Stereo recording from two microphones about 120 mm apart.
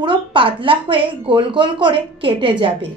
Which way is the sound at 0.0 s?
45° right (ahead or behind).